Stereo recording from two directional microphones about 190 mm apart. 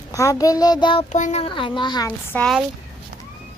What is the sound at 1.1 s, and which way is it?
A woman's voice, 35° left (ahead or behind).